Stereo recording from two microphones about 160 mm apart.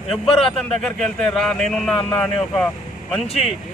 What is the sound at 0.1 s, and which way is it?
A man's voice, centre (ahead or behind).